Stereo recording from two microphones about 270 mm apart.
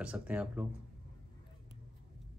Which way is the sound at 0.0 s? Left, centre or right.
Centre.